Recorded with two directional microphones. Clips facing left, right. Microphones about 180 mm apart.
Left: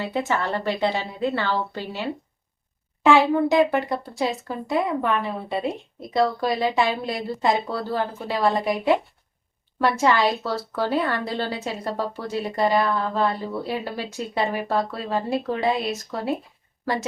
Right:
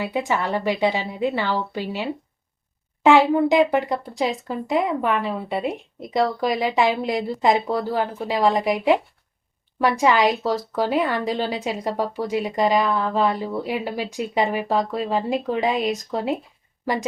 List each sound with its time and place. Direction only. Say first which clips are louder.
0.0 s a woman's voice: right 1 dB; 15° right (ahead or behind)